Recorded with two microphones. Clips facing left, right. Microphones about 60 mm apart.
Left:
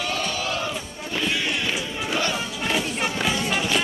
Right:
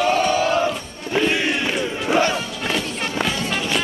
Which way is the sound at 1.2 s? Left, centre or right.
Right.